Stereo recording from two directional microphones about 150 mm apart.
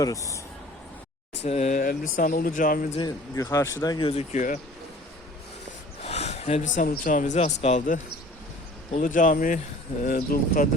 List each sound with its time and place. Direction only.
0.0 s speech: 20° left (ahead or behind)
1.5 s speech: 50° left (ahead or behind)
1.9 s speech: 75° left (ahead or behind)
3.0 s speech: 25° left (ahead or behind)
4.1 s speech: 45° left (ahead or behind)
6.0 s a man's voice: 45° left (ahead or behind); by 10.7 s 70° left (ahead or behind)